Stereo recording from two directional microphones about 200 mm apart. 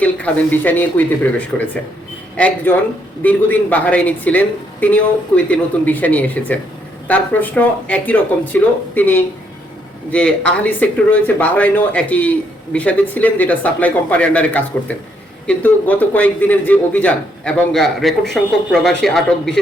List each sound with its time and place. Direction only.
0.0 s speech: 5° left (ahead or behind)